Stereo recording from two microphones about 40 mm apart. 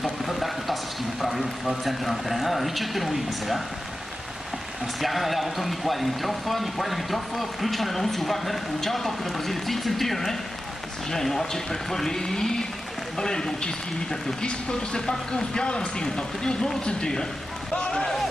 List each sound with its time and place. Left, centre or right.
0.2 s a sound: centre
1.2 s speech: centre
5.0 s speech: centre